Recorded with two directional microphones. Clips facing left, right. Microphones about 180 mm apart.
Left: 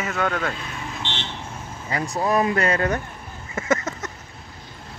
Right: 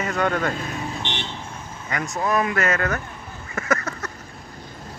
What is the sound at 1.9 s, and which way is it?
Speech, 30° left (ahead or behind).